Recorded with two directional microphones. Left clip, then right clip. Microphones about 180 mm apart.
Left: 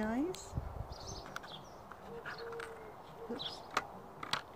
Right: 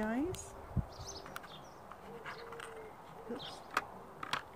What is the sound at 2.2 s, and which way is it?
Bird, 10° right (ahead or behind).